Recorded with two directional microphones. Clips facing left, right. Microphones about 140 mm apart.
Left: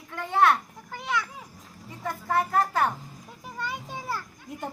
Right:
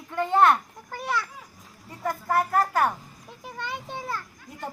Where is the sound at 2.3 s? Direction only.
5° right (ahead or behind).